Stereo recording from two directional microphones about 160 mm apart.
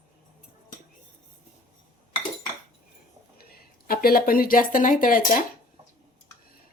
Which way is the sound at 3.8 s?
70° left (ahead or behind).